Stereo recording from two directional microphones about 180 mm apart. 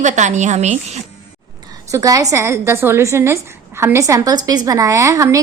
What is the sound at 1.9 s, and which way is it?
A woman's voice, 20° right (ahead or behind).